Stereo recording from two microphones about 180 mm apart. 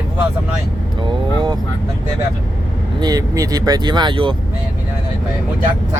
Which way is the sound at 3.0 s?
20° right (ahead or behind).